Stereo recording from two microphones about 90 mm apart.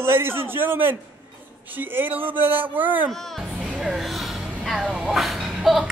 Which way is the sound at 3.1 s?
5° left (ahead or behind).